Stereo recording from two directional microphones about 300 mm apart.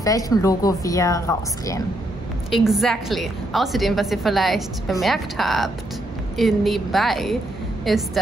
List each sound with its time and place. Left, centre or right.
0.0 s a woman's voice: centre
2.5 s a woman's voice: centre